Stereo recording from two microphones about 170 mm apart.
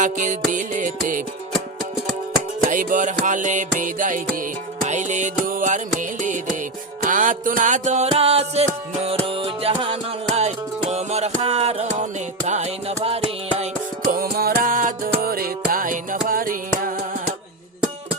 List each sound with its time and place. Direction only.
0.0 s music: 45° right (ahead or behind)
2.6 s music: 50° right (ahead or behind)
14.1 s music: 60° right (ahead or behind)